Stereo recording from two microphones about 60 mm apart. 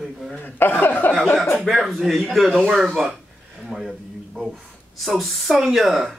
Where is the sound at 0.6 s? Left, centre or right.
Left.